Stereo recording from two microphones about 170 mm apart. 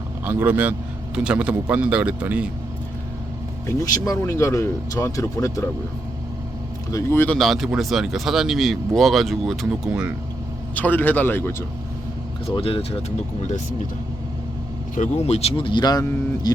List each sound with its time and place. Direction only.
0.3 s speech: 10° right (ahead or behind)
3.8 s speech: 20° left (ahead or behind)
6.9 s speech: 15° left (ahead or behind)
7.3 s speech: centre (ahead or behind)
10.8 s speech: 10° left (ahead or behind)
12.5 s speech: 35° left (ahead or behind)
14.9 s speech: 45° left (ahead or behind); by 16.5 s 20° left (ahead or behind)